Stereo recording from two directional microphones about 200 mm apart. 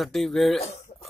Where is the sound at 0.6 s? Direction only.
30° left (ahead or behind).